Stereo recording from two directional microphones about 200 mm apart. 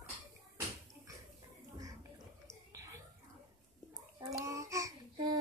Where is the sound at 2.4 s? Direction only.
15° right (ahead or behind).